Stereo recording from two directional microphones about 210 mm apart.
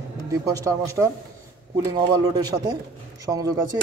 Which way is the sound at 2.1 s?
20° right (ahead or behind).